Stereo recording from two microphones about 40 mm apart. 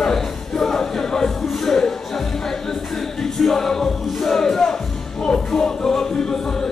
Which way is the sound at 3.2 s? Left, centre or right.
Centre.